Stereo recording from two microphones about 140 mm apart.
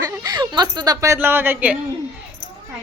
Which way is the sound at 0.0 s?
25° right (ahead or behind).